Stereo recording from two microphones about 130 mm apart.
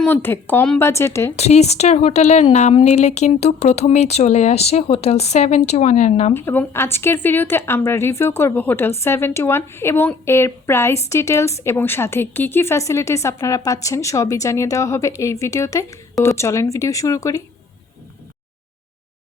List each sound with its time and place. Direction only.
0.0 s a woman's voice: 15° left (ahead or behind)
1.4 s speech: 55° left (ahead or behind)
6.3 s a woman's voice: 15° left (ahead or behind)